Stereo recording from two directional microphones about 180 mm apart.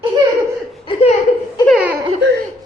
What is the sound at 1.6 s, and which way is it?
Laughter, 5° right (ahead or behind).